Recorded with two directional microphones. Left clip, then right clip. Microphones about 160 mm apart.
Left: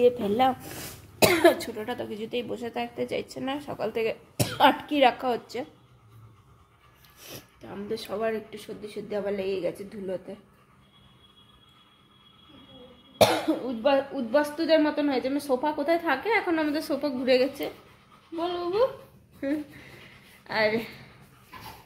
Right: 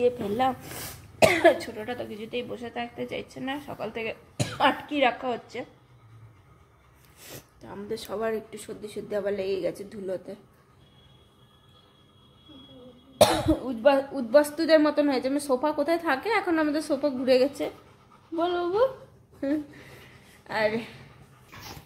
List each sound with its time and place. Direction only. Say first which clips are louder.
0.0 s speech: left 3 dB; 25° left (ahead or behind)
7.3 s speech: left 1 dB; 5° left (ahead or behind)
13.2 s speech: right 1 dB; centre (ahead or behind)
18.4 s speech: right 1 dB; 25° right (ahead or behind)
20.4 s a woman's voice: left 1 dB; centre (ahead or behind)